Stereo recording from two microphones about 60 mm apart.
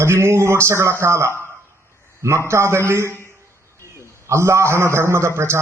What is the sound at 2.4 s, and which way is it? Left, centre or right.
Speech, right.